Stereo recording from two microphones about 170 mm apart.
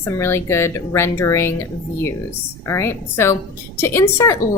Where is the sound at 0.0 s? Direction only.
15° left (ahead or behind).